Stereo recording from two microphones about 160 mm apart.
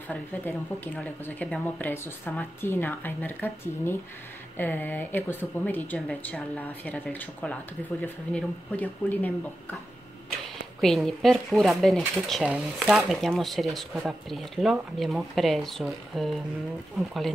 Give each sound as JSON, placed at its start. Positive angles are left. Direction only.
{"t": 0.1, "sound": "speech", "side_deg": 10}
{"t": 10.8, "sound": "speech", "side_deg": 0}